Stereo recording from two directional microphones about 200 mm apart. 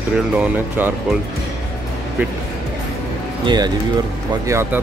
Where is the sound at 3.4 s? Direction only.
20° right (ahead or behind).